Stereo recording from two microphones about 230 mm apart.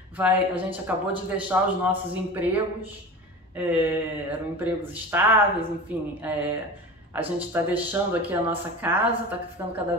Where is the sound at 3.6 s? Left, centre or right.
Centre.